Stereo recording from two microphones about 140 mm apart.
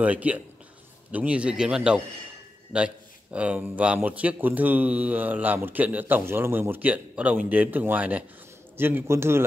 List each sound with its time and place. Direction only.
0.0 s speech: 10° right (ahead or behind)